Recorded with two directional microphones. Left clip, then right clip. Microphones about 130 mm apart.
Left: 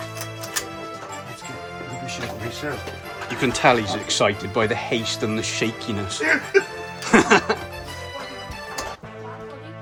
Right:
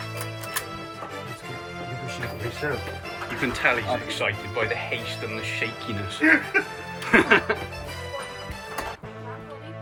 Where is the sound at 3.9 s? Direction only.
60° left (ahead or behind).